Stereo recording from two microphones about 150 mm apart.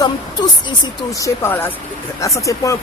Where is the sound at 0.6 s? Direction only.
25° left (ahead or behind).